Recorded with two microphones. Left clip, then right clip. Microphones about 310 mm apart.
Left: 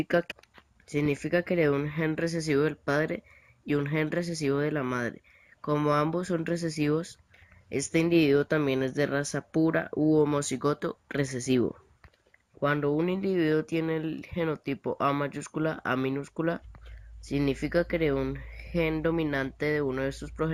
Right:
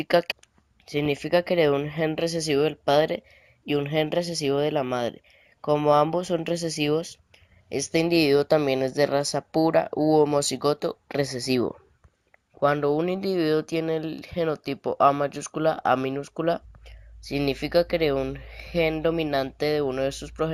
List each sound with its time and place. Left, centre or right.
0.0 s speech: centre
9.9 s speech: right
10.6 s speech: centre
12.6 s speech: centre